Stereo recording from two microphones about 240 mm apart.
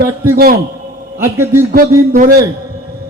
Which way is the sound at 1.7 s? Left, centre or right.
Right.